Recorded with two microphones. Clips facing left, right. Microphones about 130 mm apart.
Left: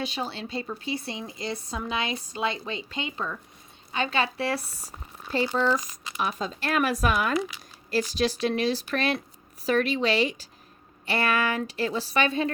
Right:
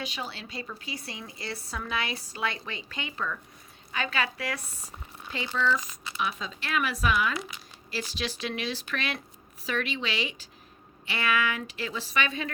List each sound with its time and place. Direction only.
0.0 s speech: 30° left (ahead or behind)